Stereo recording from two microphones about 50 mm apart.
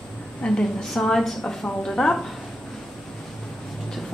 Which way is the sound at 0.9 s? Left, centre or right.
Centre.